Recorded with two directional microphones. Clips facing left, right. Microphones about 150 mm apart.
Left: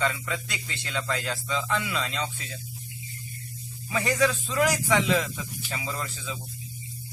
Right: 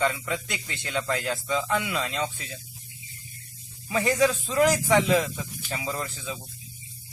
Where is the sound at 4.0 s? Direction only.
20° right (ahead or behind).